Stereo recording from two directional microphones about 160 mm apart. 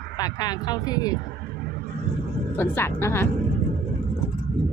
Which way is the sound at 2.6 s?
15° left (ahead or behind).